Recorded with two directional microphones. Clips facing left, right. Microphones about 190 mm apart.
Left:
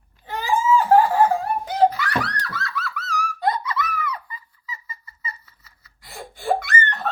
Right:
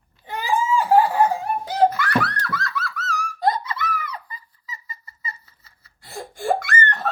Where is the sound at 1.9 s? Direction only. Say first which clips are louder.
Right 3 dB; 50° right (ahead or behind).